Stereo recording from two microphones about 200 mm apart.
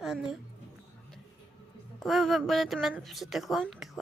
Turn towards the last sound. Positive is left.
turn(degrees=0)  # may be behind; listen again after turning